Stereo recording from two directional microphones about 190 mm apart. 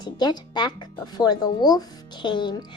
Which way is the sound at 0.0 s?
20° left (ahead or behind).